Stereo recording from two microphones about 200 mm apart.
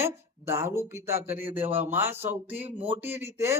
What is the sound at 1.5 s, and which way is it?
Speech, 25° right (ahead or behind).